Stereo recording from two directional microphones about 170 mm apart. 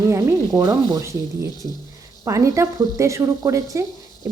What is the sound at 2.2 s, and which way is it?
Speech, 20° right (ahead or behind).